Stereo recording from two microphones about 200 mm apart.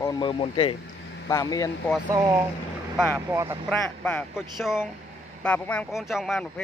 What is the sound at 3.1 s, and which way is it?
Speech, 15° right (ahead or behind).